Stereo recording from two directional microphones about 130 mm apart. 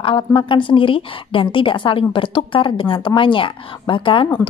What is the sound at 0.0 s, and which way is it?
A woman's voice, 40° left (ahead or behind).